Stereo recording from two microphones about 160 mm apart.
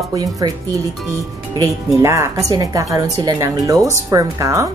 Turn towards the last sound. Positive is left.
turn(degrees=-20)  # may be behind; listen again after turning